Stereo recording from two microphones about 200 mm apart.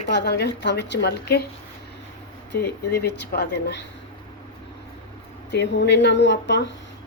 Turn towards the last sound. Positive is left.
turn(degrees=60)  # may be behind; listen again after turning